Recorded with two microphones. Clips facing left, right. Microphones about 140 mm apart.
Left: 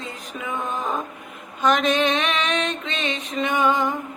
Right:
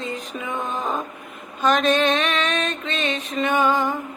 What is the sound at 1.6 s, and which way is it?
Mantra, 15° left (ahead or behind).